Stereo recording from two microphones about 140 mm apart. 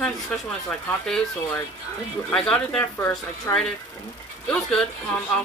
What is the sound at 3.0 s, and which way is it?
Speech, 20° left (ahead or behind).